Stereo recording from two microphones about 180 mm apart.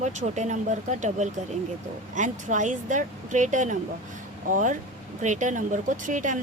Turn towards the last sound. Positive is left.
turn(degrees=-45)  # may be behind; listen again after turning